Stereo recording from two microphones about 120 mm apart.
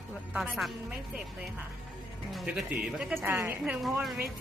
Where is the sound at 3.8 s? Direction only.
Centre (ahead or behind).